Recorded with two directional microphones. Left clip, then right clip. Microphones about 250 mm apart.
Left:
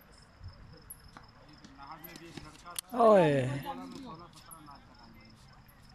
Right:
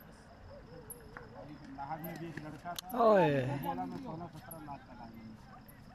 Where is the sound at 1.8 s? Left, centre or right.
Right.